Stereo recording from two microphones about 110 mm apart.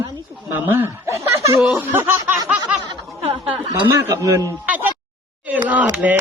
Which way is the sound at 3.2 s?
60° right (ahead or behind).